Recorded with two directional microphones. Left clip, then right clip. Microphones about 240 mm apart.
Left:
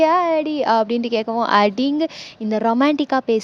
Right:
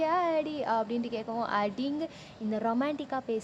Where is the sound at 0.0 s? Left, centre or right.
Left.